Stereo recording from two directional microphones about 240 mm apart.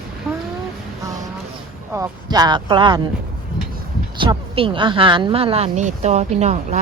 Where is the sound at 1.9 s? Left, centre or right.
Centre.